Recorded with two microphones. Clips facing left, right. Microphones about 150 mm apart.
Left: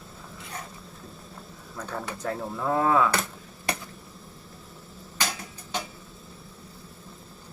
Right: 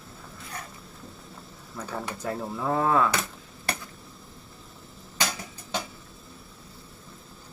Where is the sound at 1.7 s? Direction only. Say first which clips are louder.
Even; centre (ahead or behind).